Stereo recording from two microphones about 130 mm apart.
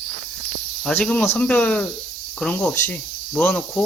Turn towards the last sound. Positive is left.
turn(degrees=10)  # may be behind; listen again after turning